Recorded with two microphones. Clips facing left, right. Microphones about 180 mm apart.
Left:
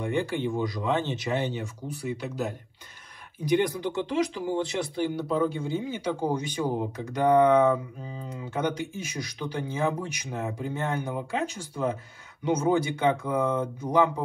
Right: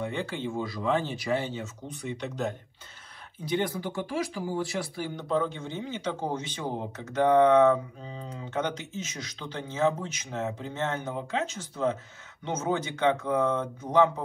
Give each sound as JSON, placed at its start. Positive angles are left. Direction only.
{"t": 0.0, "sound": "speech", "side_deg": 15}
{"t": 3.4, "sound": "speech", "side_deg": 15}
{"t": 5.1, "sound": "speech", "side_deg": 10}